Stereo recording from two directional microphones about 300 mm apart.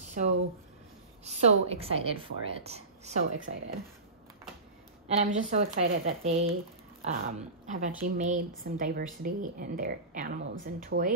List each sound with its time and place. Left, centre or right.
0.0 s a sound: right
1.2 s a woman's voice: centre
5.0 s a woman's voice: right